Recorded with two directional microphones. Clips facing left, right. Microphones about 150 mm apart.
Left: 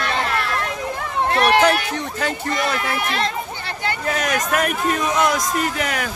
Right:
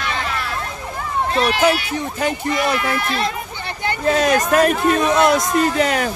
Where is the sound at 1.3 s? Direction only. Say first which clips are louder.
Left 4 dB; 65° left (ahead or behind).